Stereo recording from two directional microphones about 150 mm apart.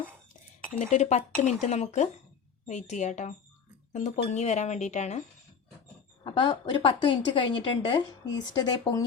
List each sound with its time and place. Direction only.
0.7 s speech: 60° left (ahead or behind)
6.2 s a woman's voice: 30° left (ahead or behind)